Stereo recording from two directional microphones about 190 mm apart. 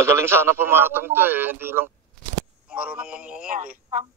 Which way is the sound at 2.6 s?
5° right (ahead or behind).